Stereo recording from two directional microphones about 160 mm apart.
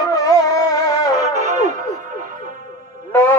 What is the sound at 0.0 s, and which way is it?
Music, 20° left (ahead or behind).